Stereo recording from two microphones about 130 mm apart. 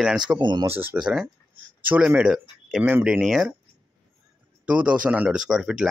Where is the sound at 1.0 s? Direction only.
5° right (ahead or behind).